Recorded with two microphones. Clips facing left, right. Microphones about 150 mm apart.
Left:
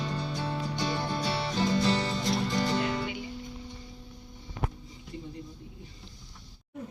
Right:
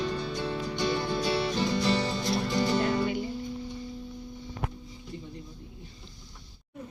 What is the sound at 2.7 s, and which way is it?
Music, 45° right (ahead or behind).